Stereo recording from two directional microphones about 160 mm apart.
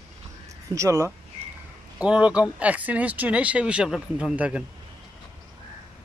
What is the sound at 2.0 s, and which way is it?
Speech, 5° right (ahead or behind).